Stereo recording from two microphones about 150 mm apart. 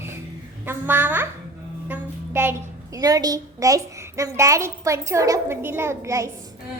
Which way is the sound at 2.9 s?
25° right (ahead or behind).